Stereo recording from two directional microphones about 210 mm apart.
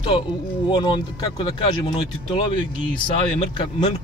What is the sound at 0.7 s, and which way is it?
Speech, 20° left (ahead or behind).